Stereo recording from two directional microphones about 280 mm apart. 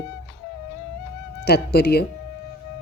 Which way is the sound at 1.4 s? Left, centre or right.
Left.